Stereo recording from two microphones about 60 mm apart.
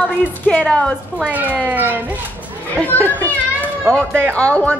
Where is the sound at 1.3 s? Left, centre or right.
Right.